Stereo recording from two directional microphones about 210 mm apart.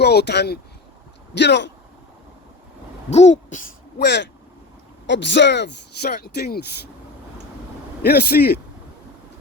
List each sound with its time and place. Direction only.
0.0 s speech: 50° left (ahead or behind)
3.1 s speech: 35° left (ahead or behind)
3.9 s speech: 55° left (ahead or behind)
8.0 s speech: 50° left (ahead or behind)